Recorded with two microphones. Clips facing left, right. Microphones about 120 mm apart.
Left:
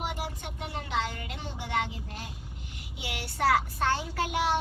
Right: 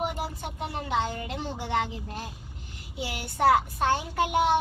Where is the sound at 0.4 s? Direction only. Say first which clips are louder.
Right 4 dB; 30° right (ahead or behind).